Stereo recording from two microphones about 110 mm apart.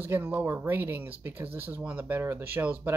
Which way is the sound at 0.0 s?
20° right (ahead or behind).